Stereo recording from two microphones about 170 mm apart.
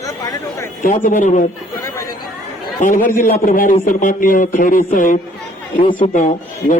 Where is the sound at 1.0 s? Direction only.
50° left (ahead or behind).